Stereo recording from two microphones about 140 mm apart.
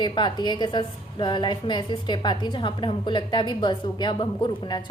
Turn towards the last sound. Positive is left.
turn(degrees=35)  # may be behind; listen again after turning